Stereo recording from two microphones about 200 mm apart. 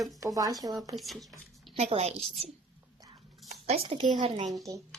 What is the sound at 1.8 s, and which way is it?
Speech, 35° right (ahead or behind).